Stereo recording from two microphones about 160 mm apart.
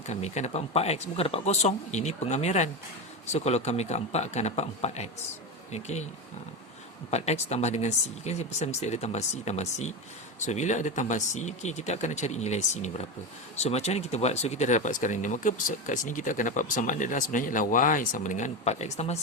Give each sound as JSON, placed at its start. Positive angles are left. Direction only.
{"t": 0.1, "sound": "speech", "side_deg": 45}
{"t": 7.1, "sound": "speech", "side_deg": 40}